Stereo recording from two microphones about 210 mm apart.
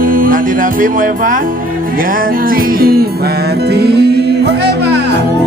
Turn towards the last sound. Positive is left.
turn(degrees=-50)  # may be behind; listen again after turning